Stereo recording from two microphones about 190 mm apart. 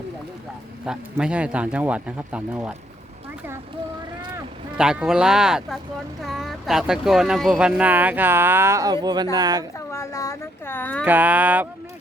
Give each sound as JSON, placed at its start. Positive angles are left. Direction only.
{"t": 0.9, "sound": "speech", "side_deg": -5}
{"t": 4.8, "sound": "speech", "side_deg": -5}
{"t": 9.7, "sound": "a woman's voice", "side_deg": 15}
{"t": 11.0, "sound": "speech", "side_deg": -10}